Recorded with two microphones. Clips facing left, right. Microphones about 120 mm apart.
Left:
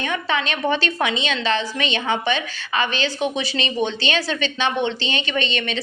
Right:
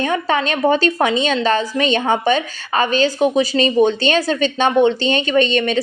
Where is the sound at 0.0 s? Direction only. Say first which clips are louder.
Right 5 dB; 40° right (ahead or behind).